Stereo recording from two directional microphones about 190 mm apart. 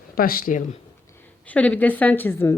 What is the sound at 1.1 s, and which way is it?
A woman's voice, 10° left (ahead or behind).